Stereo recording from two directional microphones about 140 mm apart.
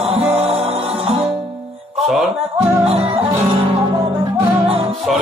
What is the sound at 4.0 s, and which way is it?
Music, 35° right (ahead or behind).